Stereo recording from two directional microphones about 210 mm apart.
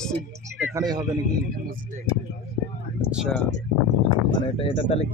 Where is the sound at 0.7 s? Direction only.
20° right (ahead or behind).